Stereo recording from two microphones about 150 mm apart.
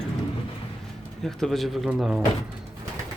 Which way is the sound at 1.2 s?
Centre (ahead or behind).